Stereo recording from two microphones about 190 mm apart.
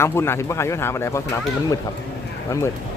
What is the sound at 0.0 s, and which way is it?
Speech, 15° left (ahead or behind).